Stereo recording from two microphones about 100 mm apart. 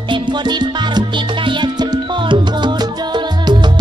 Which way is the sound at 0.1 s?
50° right (ahead or behind).